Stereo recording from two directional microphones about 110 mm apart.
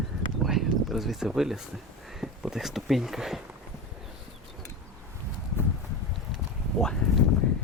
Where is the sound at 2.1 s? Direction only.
5° right (ahead or behind).